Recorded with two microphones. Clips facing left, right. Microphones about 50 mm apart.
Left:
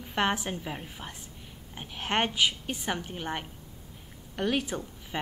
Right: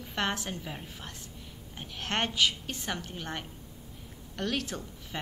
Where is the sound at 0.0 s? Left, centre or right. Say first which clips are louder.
Left 4 dB; centre.